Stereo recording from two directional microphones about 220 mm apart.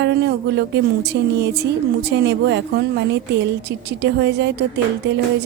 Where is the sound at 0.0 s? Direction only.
50° right (ahead or behind).